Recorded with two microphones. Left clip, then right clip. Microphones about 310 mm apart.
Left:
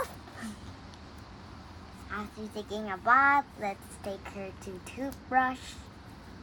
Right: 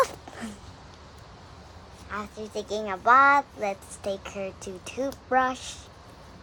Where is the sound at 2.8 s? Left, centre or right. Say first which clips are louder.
Right 5 dB; right.